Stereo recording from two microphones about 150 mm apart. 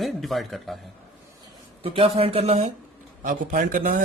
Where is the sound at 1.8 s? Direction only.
40° right (ahead or behind).